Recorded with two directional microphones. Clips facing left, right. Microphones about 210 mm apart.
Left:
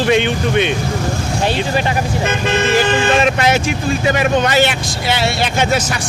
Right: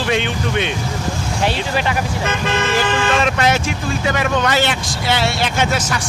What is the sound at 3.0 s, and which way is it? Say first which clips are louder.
Speech: left 3 dB; 20° left (ahead or behind).